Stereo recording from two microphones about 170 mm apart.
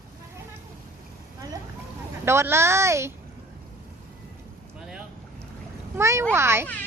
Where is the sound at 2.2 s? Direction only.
15° right (ahead or behind).